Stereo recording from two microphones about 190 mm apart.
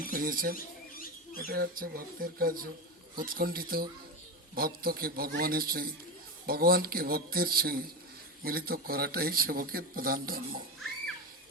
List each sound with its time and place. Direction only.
0.1 s speech: 50° right (ahead or behind)
0.5 s rodents: 50° left (ahead or behind)
1.5 s speech: 50° right (ahead or behind)